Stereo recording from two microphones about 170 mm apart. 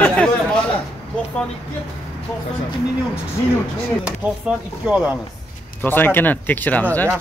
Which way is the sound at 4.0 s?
5° right (ahead or behind).